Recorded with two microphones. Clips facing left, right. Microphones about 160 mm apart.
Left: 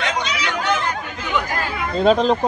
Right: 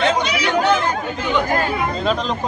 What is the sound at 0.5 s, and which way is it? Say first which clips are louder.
Speech: right 7 dB; 35° right (ahead or behind).